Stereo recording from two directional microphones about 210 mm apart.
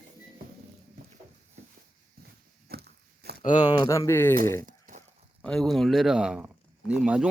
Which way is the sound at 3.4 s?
35° left (ahead or behind).